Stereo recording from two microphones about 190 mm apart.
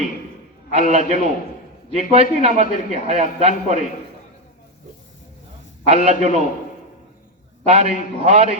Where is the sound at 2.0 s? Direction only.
35° right (ahead or behind).